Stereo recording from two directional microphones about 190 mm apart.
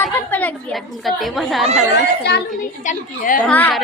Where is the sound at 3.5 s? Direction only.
10° left (ahead or behind).